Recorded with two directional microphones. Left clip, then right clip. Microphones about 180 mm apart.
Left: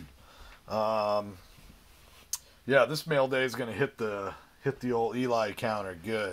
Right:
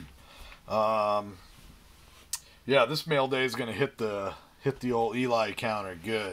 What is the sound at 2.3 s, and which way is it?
Speech, 15° left (ahead or behind).